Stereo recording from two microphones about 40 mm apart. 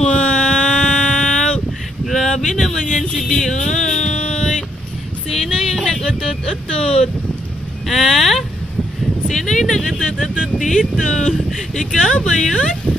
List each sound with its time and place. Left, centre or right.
0.0 s a sound: left
5.3 s music: centre
7.9 s vehicle: centre
9.3 s speech: centre